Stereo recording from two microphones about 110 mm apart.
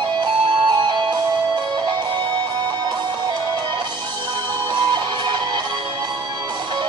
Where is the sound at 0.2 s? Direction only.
45° right (ahead or behind).